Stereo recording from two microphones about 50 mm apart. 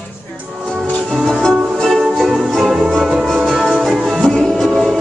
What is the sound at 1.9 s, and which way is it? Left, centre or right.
Music, centre.